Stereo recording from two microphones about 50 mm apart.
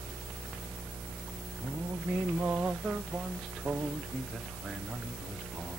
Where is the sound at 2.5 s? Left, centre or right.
Right.